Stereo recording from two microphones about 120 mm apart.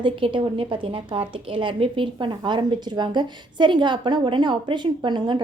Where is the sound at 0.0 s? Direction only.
45° right (ahead or behind).